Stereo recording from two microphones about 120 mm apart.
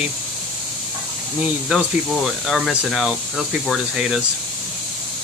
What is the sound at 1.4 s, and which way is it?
Speech, 5° right (ahead or behind).